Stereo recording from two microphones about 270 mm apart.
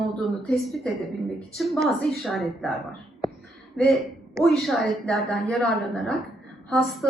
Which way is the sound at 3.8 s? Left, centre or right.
Centre.